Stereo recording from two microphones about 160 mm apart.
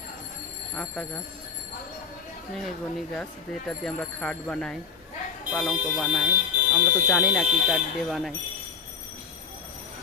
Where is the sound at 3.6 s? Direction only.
5° left (ahead or behind).